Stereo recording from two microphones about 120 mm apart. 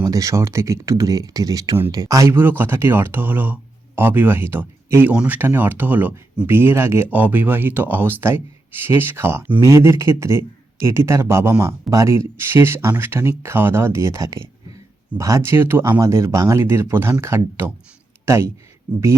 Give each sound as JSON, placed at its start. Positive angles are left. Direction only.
{"t": 0.0, "sound": "speech", "side_deg": -30}